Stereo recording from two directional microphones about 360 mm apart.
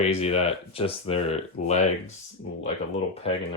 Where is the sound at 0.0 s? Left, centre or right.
Centre.